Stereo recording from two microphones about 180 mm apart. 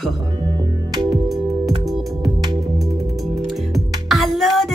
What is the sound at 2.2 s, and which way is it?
Music, 25° right (ahead or behind).